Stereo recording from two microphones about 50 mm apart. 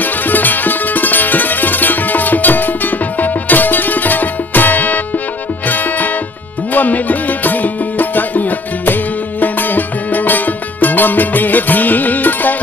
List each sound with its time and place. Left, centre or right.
0.0 s music: left